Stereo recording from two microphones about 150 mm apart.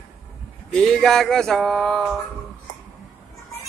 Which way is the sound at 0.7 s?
5° left (ahead or behind).